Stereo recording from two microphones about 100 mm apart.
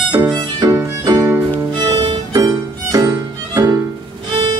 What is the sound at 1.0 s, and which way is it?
Music, 35° right (ahead or behind).